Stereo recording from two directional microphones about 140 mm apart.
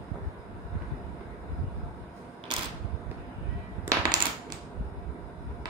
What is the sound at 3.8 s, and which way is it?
Coin, 30° right (ahead or behind).